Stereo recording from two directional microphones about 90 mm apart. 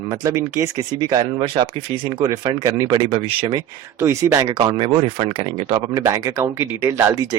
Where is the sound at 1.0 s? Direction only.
55° right (ahead or behind).